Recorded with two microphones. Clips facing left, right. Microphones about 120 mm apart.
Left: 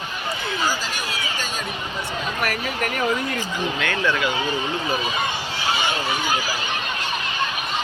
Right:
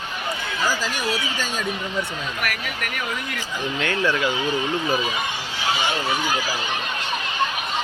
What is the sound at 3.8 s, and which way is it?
Speech, 35° right (ahead or behind).